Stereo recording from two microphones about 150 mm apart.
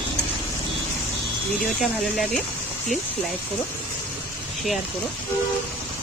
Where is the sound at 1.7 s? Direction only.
Centre (ahead or behind).